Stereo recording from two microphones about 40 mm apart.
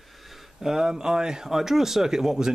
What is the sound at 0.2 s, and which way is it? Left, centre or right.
Speech, centre.